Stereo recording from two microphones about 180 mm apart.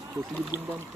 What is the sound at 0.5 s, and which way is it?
Speech, 20° left (ahead or behind).